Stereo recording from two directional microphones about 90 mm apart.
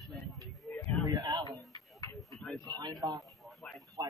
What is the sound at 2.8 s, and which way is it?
Speech, 50° right (ahead or behind).